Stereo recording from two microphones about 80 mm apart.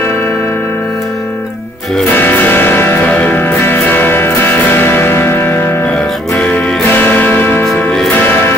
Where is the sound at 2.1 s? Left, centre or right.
Left.